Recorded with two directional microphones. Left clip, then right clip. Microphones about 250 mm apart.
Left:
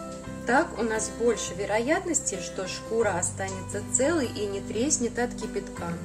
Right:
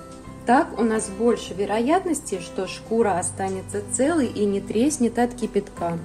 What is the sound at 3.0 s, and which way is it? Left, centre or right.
A woman's voice, right.